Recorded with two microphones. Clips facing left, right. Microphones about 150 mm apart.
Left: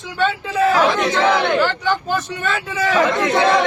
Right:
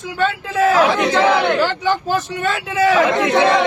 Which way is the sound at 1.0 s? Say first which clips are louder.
Right 2 dB; 10° right (ahead or behind).